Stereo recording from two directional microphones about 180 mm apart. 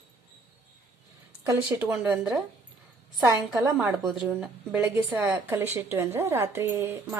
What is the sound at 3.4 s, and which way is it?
A woman's voice, centre (ahead or behind).